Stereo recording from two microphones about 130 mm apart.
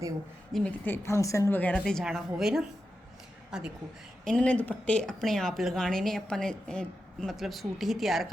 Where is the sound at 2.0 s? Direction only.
5° right (ahead or behind).